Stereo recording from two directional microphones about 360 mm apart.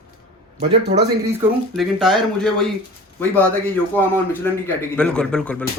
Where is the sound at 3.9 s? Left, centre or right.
Centre.